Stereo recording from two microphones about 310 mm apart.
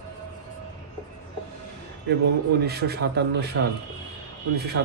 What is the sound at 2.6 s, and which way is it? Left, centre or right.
Speech, right.